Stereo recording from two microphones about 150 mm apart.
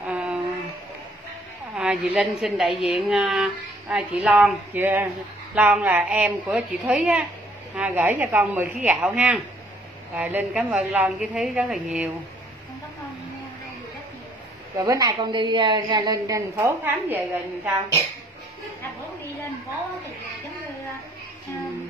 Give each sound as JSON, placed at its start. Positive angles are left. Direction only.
{"t": 0.0, "sound": "a sound", "side_deg": -10}
{"t": 1.8, "sound": "a woman's voice", "side_deg": -5}
{"t": 14.8, "sound": "a woman's voice", "side_deg": -25}
{"t": 16.5, "sound": "speech", "side_deg": -15}